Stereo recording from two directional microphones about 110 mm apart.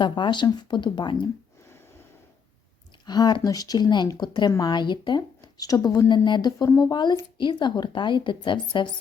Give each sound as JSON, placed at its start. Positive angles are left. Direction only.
{"t": 0.0, "sound": "a woman's voice", "side_deg": 45}
{"t": 3.1, "sound": "a woman's voice", "side_deg": 40}
{"t": 6.9, "sound": "a woman's voice", "side_deg": 45}